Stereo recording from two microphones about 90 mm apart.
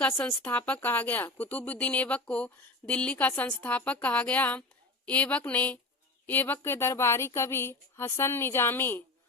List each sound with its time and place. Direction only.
0.2 s speech: 15° left (ahead or behind)